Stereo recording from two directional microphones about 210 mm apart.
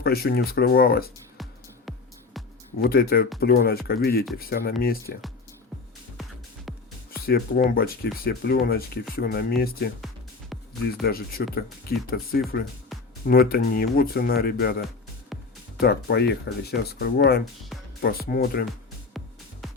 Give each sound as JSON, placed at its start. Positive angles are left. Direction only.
{"t": 0.0, "sound": "speech", "side_deg": 45}
{"t": 2.7, "sound": "speech", "side_deg": 45}
{"t": 6.7, "sound": "music", "side_deg": 0}
{"t": 7.3, "sound": "speech", "side_deg": 45}
{"t": 10.5, "sound": "music", "side_deg": 0}
{"t": 11.0, "sound": "speech", "side_deg": 45}
{"t": 15.3, "sound": "music", "side_deg": 0}
{"t": 15.8, "sound": "speech", "side_deg": 50}
{"t": 19.1, "sound": "music", "side_deg": 0}